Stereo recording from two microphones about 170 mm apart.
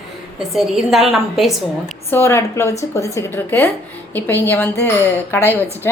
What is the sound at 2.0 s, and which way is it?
A woman's voice, 15° left (ahead or behind).